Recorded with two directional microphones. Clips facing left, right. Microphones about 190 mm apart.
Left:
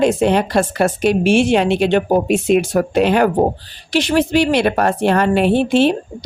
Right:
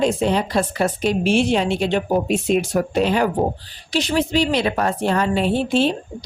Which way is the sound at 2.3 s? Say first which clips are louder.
Left 4 dB; 75° left (ahead or behind).